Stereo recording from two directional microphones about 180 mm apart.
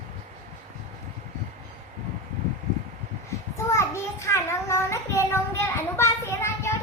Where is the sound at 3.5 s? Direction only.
15° left (ahead or behind).